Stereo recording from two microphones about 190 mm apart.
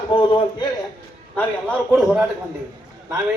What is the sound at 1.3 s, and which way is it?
Speech, 5° left (ahead or behind).